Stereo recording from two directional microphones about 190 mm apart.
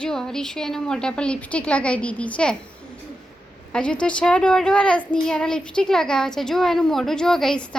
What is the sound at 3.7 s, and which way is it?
Speech, 5° left (ahead or behind).